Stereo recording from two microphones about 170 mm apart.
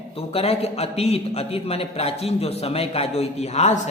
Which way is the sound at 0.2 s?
35° left (ahead or behind).